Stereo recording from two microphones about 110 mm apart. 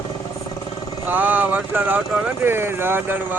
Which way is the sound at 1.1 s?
15° right (ahead or behind).